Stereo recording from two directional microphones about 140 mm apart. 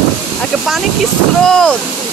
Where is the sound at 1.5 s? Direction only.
5° left (ahead or behind).